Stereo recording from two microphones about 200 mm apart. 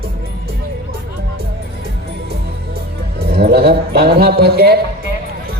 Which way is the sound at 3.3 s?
50° right (ahead or behind).